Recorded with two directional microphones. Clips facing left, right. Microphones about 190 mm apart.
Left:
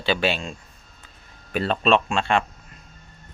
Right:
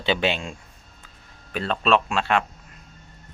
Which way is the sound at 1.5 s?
5° left (ahead or behind).